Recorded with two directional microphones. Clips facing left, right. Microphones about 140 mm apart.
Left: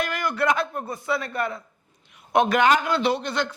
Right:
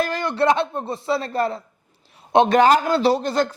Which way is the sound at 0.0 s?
30° right (ahead or behind).